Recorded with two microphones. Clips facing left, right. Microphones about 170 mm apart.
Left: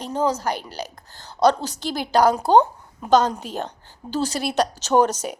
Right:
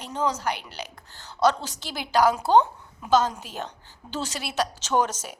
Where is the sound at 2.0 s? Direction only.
45° left (ahead or behind).